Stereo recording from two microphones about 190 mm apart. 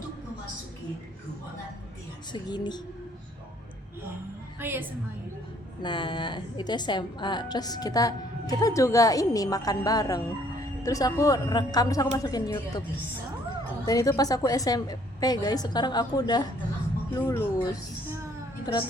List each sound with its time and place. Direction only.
2.3 s a woman's voice: 20° left (ahead or behind)
4.6 s a woman's voice: 10° right (ahead or behind)
5.8 s a woman's voice: 25° left (ahead or behind)
13.8 s a woman's voice: 20° left (ahead or behind)
18.6 s a woman's voice: 25° left (ahead or behind)